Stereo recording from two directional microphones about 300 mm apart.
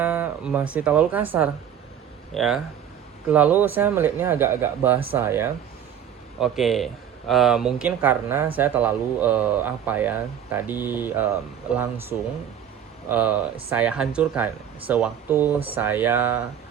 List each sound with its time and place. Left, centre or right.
0.0 s speech: centre